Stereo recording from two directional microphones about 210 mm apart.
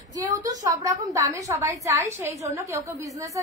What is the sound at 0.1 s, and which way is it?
A woman's voice, 15° right (ahead or behind).